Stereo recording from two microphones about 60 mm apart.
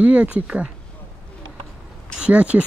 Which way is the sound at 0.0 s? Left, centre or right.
Right.